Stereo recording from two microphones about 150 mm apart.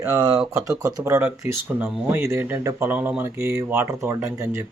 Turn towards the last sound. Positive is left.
turn(degrees=-20)  # may be behind; listen again after turning